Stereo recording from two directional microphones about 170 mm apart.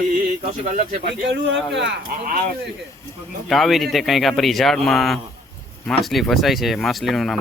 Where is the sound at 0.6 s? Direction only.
50° right (ahead or behind).